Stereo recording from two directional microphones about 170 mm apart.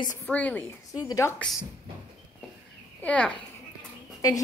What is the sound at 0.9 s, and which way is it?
Speech, 20° left (ahead or behind).